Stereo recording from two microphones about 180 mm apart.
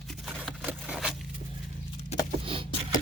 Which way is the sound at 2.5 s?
30° right (ahead or behind).